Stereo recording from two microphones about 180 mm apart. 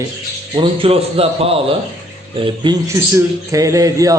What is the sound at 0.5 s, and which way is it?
A man's voice, 30° right (ahead or behind).